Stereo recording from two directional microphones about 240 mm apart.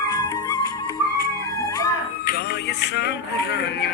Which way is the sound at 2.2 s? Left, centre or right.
Left.